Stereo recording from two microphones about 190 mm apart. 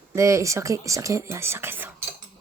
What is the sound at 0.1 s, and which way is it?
Speech, 15° right (ahead or behind).